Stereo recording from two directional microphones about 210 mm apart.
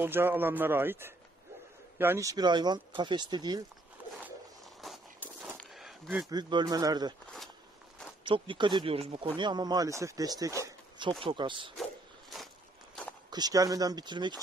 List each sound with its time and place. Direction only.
0.0 s a man's voice: 10° right (ahead or behind)
4.8 s walk: centre (ahead or behind)
5.6 s a sound: centre (ahead or behind)
6.2 s speech: 20° right (ahead or behind)
8.2 s speech: 25° right (ahead or behind)
10.6 s a sound: 20° right (ahead or behind)
11.2 s speech: 25° right (ahead or behind)
13.3 s speech: 20° right (ahead or behind)